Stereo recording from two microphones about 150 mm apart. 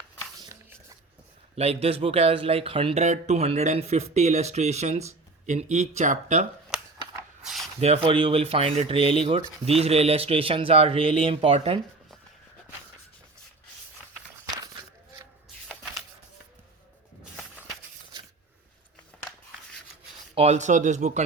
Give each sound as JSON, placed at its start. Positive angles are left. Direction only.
{"t": 1.5, "sound": "speech", "side_deg": -45}
{"t": 3.0, "sound": "speech", "side_deg": -50}
{"t": 7.4, "sound": "a sound", "side_deg": 0}
{"t": 7.8, "sound": "speech", "side_deg": -40}
{"t": 15.7, "sound": "a sound", "side_deg": 0}
{"t": 20.3, "sound": "speech", "side_deg": -45}